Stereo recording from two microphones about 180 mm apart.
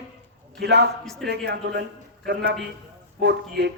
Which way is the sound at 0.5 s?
70° right (ahead or behind).